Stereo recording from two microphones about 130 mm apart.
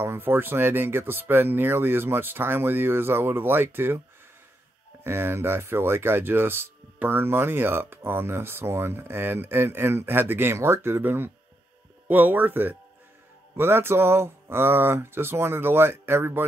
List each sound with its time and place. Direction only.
0.0 s speech: 15° right (ahead or behind)
5.0 s speech: 20° right (ahead or behind)